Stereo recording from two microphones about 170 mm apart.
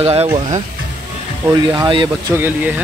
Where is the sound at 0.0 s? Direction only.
35° right (ahead or behind).